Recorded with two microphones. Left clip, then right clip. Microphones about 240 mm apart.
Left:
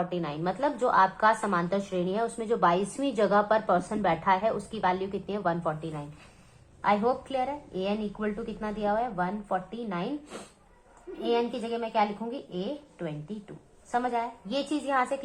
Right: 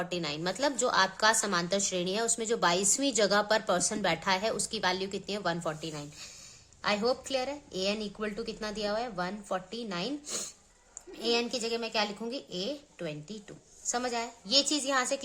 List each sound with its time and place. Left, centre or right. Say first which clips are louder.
0.0 s a woman's voice: left 2 dB; right